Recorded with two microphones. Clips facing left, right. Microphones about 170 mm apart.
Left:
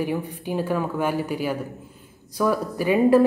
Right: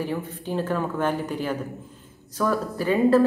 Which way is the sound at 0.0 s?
15° left (ahead or behind).